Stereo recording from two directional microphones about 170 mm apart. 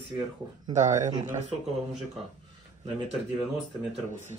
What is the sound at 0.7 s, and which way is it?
Speech, 45° right (ahead or behind).